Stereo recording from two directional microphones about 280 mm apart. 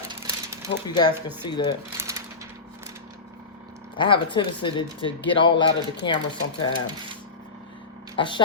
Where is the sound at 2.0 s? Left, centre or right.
Centre.